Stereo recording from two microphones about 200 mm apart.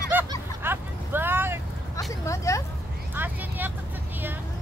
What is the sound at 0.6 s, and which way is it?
Vehicle, 10° right (ahead or behind).